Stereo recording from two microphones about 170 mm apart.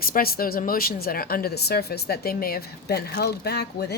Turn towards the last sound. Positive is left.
turn(degrees=70)  # may be behind; listen again after turning